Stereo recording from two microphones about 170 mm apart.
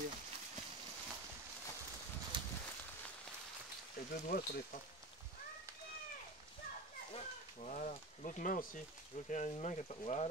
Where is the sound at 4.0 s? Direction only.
65° left (ahead or behind).